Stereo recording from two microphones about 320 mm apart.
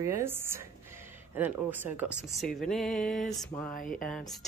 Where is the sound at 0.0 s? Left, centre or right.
Centre.